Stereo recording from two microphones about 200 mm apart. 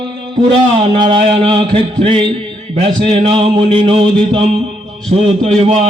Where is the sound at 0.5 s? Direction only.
25° right (ahead or behind).